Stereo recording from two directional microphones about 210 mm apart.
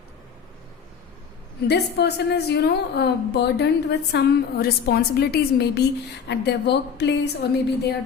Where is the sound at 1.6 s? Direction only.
50° left (ahead or behind).